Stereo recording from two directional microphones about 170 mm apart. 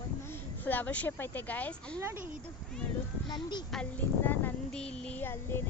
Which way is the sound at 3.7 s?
10° left (ahead or behind).